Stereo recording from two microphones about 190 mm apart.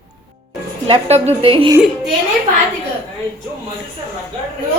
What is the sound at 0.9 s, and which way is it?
Speech, 30° right (ahead or behind).